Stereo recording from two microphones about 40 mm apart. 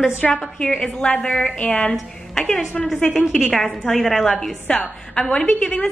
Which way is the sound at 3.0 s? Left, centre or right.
Left.